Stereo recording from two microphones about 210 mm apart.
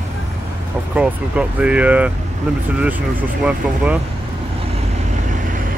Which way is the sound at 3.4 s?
5° right (ahead or behind).